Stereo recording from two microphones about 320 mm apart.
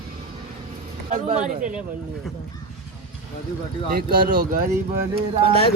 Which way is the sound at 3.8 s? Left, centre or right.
Right.